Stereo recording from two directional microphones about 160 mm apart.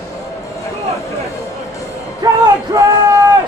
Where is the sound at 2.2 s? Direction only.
25° right (ahead or behind).